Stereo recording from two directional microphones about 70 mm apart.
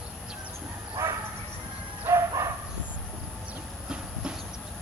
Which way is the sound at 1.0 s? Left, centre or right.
Right.